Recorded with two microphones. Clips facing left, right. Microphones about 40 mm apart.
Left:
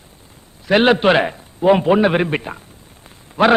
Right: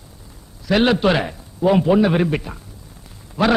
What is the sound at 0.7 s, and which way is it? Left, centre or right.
A man's voice, left.